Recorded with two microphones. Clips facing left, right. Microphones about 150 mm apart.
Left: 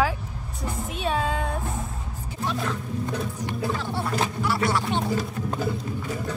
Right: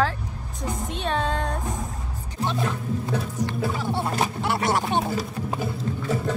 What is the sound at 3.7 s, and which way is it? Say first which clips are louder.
Speech: right 2 dB; 10° right (ahead or behind).